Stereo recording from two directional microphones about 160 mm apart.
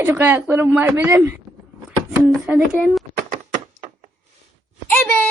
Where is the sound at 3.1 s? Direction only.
55° right (ahead or behind).